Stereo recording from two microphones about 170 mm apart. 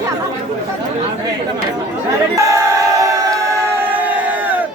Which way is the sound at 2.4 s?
20° right (ahead or behind).